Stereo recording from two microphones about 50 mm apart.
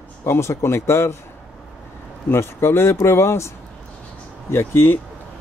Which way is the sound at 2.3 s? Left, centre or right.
Left.